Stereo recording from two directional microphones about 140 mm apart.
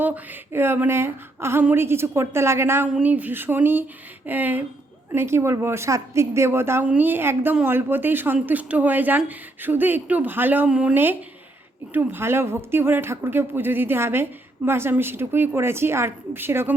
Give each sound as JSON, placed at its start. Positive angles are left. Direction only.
{"t": 0.0, "sound": "a woman's voice", "side_deg": -15}